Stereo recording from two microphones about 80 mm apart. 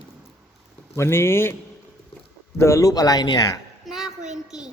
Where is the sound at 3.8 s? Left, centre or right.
Centre.